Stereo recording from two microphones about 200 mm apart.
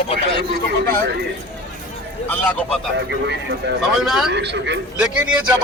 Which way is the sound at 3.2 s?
60° right (ahead or behind).